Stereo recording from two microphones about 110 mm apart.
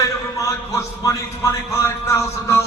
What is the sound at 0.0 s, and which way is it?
A man's voice, 30° left (ahead or behind).